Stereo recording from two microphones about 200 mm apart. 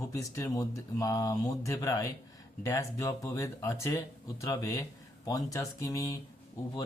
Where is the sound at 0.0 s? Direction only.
15° left (ahead or behind).